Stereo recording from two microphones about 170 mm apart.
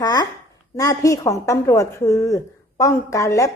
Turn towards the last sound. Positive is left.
turn(degrees=20)  # may be behind; listen again after turning